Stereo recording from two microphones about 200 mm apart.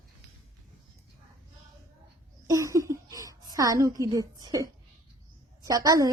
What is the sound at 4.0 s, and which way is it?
A woman's voice, 20° right (ahead or behind).